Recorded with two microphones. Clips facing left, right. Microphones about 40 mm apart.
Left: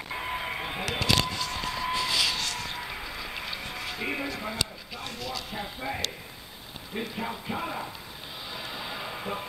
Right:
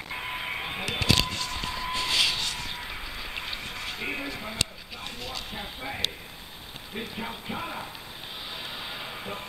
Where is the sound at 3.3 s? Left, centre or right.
Centre.